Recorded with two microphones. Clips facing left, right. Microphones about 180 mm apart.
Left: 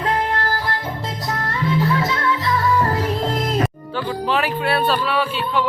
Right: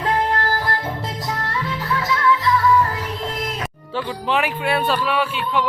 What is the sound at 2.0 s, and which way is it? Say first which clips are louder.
Music: right 1 dB; 30° left (ahead or behind).